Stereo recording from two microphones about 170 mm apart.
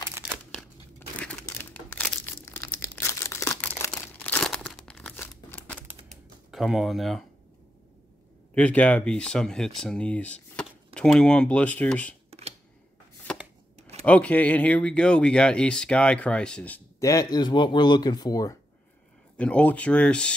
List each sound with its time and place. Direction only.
0.9 s crumpling: 10° left (ahead or behind)
6.5 s speech: centre (ahead or behind)
8.5 s speech: 10° left (ahead or behind)
12.3 s a sound: 35° right (ahead or behind)
14.0 s speech: 10° left (ahead or behind)
17.1 s speech: 20° left (ahead or behind)
19.3 s speech: 5° left (ahead or behind)